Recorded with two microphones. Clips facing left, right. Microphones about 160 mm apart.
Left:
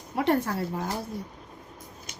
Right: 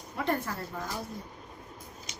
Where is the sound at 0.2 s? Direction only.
70° left (ahead or behind).